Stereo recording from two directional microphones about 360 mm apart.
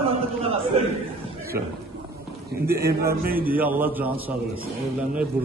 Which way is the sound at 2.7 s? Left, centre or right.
Centre.